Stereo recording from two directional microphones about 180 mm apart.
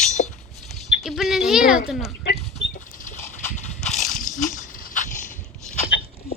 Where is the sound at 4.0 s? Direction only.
45° left (ahead or behind).